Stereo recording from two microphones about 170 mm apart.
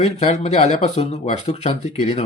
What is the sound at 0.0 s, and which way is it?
Speech, 40° left (ahead or behind).